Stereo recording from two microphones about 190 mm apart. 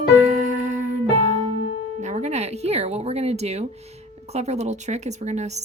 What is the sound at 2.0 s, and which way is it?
Music, 35° right (ahead or behind).